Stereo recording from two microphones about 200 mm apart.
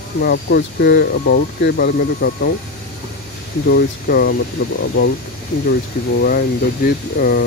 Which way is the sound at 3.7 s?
50° left (ahead or behind).